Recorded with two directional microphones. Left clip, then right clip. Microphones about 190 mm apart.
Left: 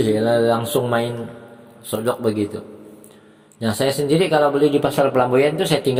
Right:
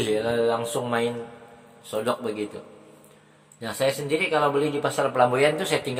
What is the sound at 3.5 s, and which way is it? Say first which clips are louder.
Speech: left 5 dB; 35° left (ahead or behind).